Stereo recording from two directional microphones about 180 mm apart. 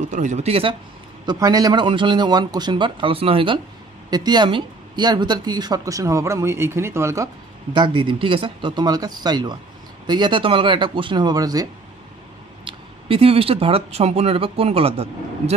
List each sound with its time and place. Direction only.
0.1 s speech: 40° right (ahead or behind)
1.2 s speech: 20° right (ahead or behind)
7.7 s speech: 25° right (ahead or behind)
12.6 s speech: 30° right (ahead or behind)